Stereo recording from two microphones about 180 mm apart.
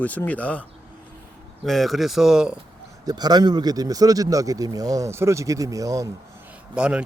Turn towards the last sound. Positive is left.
turn(degrees=-5)  # may be behind; listen again after turning